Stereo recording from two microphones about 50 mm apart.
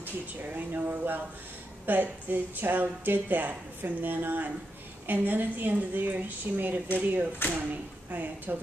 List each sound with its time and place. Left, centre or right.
0.0 s speech: right